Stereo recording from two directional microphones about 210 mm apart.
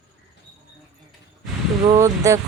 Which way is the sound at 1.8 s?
15° right (ahead or behind).